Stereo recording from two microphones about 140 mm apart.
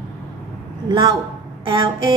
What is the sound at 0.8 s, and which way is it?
Speech, 30° right (ahead or behind).